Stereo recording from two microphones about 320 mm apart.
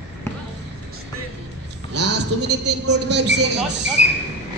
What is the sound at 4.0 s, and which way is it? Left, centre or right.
Speech, left.